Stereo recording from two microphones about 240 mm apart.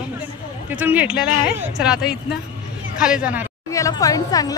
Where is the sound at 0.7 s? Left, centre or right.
Centre.